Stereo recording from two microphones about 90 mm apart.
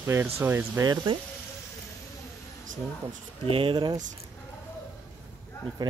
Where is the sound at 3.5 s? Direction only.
85° right.